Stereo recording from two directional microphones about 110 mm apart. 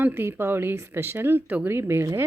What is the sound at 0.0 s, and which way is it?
A woman's voice, 20° right (ahead or behind).